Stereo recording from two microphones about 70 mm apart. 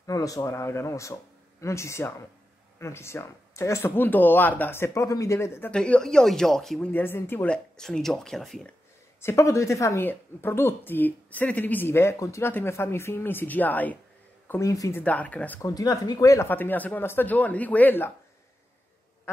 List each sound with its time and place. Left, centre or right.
0.0 s a woman's voice: left
5.7 s speech: centre
6.9 s speech: left
7.4 s speech: centre
9.2 s a woman's voice: left
10.0 s speech: left
14.6 s speech: left
15.0 s speech: left
15.6 s speech: left
16.4 s speech: left